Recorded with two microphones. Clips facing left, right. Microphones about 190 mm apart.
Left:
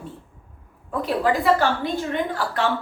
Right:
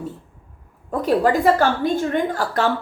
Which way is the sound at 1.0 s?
45° right (ahead or behind).